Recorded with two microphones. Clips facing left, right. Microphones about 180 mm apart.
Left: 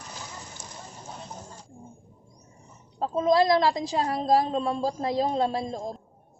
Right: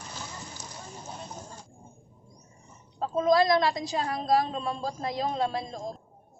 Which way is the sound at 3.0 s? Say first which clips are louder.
Left 1 dB; 25° left (ahead or behind).